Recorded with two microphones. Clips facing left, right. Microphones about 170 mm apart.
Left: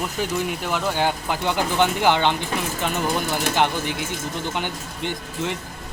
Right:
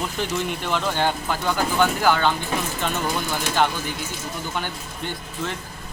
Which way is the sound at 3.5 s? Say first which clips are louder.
Right 1 dB; 15° left (ahead or behind).